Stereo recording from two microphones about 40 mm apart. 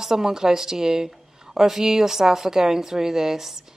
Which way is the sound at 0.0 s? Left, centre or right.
Centre.